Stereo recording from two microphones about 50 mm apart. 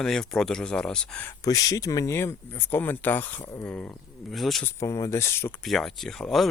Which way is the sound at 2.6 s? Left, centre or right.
Left.